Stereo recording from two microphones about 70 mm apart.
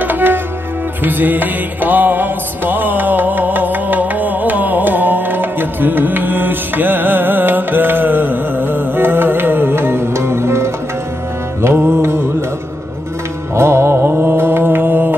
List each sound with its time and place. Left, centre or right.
0.0 s music: right
11.6 s mantra: right
13.6 s mantra: right